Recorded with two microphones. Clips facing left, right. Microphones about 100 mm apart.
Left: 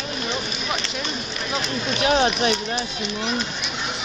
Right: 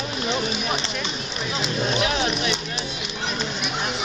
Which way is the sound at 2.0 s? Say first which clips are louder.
Left 4 dB; 35° left (ahead or behind).